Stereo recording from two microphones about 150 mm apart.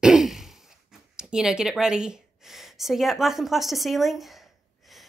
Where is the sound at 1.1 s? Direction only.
5° right (ahead or behind).